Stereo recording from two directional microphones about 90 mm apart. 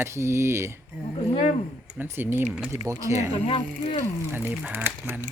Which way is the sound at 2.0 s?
20° right (ahead or behind).